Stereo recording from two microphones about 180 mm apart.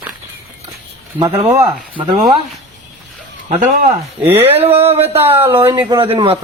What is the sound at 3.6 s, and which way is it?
Speech, 45° right (ahead or behind).